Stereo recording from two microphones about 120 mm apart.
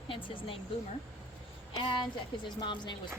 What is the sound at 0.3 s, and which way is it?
Speech, 50° left (ahead or behind).